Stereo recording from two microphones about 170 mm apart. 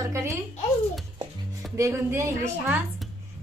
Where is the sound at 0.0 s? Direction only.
15° right (ahead or behind).